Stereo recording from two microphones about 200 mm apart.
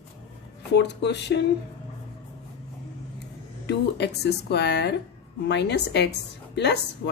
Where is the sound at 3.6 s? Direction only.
55° left (ahead or behind).